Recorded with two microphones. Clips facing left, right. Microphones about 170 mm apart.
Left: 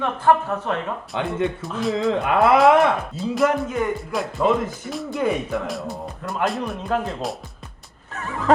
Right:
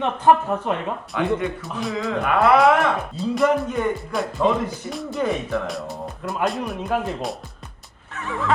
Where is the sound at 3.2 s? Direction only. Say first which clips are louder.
Right 3 dB; centre (ahead or behind).